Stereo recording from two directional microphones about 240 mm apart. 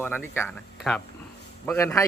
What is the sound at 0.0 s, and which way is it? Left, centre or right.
A man's voice, centre.